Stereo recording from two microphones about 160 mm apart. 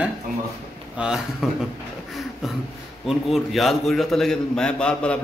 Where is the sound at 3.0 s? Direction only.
Centre (ahead or behind).